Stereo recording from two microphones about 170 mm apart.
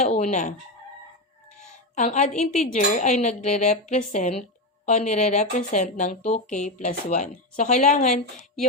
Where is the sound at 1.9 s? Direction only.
45° left (ahead or behind).